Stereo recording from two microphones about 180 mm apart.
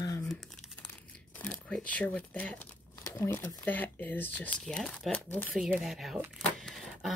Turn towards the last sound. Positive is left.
turn(degrees=0)  # may be behind; listen again after turning